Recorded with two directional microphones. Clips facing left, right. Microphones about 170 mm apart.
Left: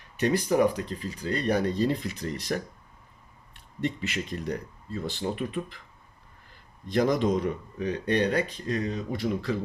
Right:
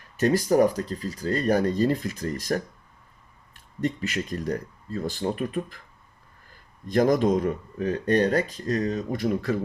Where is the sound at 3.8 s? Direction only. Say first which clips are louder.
Right 3 dB; 45° right (ahead or behind).